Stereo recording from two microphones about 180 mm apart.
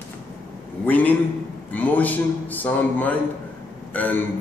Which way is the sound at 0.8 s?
10° left (ahead or behind).